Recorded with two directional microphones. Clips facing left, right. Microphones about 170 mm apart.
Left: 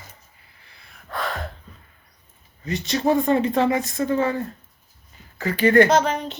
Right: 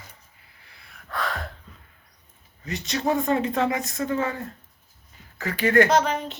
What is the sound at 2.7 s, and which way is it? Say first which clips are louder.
Speech: left 4 dB; centre (ahead or behind).